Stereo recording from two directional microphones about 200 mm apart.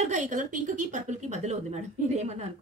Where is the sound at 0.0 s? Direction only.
35° right (ahead or behind).